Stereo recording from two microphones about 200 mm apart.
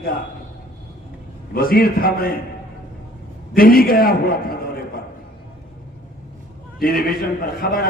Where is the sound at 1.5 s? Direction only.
50° left (ahead or behind).